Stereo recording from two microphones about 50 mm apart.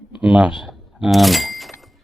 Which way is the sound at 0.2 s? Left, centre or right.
Centre.